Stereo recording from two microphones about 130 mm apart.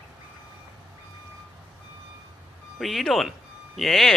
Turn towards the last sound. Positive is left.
turn(degrees=0)  # may be behind; listen again after turning